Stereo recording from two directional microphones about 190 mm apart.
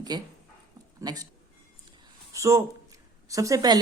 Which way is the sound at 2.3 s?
15° right (ahead or behind).